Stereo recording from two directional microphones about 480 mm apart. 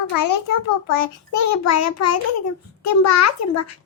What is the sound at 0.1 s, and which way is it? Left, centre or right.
A child's voice, left.